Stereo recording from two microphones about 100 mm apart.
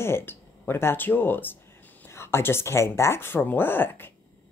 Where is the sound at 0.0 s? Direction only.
25° left (ahead or behind).